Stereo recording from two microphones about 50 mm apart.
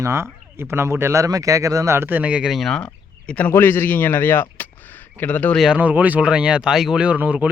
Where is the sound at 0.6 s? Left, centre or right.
Right.